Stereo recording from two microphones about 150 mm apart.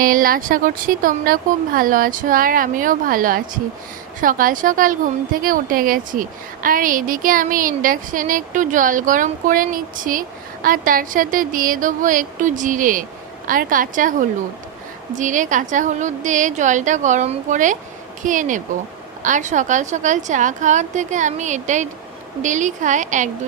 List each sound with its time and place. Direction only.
0.0 s a woman's voice: 70° right (ahead or behind)